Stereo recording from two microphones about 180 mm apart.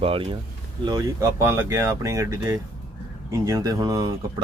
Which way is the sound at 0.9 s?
20° right (ahead or behind).